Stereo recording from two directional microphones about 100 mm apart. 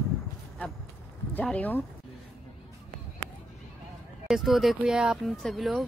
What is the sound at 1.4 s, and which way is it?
Speech, 15° left (ahead or behind).